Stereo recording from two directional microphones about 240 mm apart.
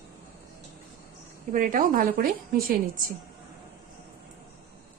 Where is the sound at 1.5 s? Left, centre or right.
Right.